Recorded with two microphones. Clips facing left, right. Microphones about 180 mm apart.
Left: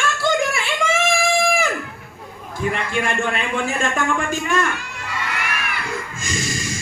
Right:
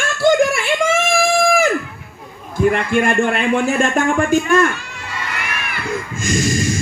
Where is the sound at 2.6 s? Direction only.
50° right (ahead or behind).